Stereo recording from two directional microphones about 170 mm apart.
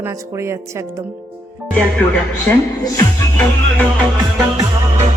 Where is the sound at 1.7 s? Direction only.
5° left (ahead or behind).